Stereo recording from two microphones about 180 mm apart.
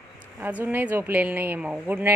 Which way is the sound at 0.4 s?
10° right (ahead or behind).